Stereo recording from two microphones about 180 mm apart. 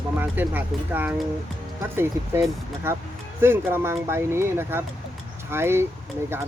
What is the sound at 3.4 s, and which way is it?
Speech, 15° right (ahead or behind).